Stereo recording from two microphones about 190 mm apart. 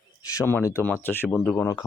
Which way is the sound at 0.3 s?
15° left (ahead or behind).